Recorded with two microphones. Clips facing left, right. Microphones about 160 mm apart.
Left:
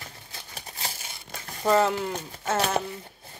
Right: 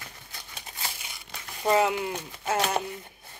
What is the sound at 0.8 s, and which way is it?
Crumpling, 40° left (ahead or behind).